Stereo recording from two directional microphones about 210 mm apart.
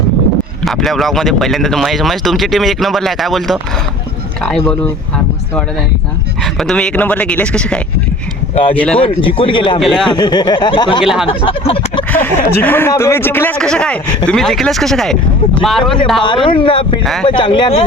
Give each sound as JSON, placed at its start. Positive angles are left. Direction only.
{"t": 0.6, "sound": "speech", "side_deg": 0}
{"t": 6.4, "sound": "speech", "side_deg": 0}
{"t": 9.0, "sound": "speech", "side_deg": 25}
{"t": 9.8, "sound": "speech", "side_deg": 0}
{"t": 10.1, "sound": "speech", "side_deg": 20}
{"t": 11.0, "sound": "speech", "side_deg": 0}
{"t": 11.3, "sound": "speech", "side_deg": 25}
{"t": 12.1, "sound": "speech", "side_deg": 10}
{"t": 16.2, "sound": "speech", "side_deg": 25}
{"t": 17.0, "sound": "speech", "side_deg": 0}
{"t": 17.2, "sound": "speech", "side_deg": 20}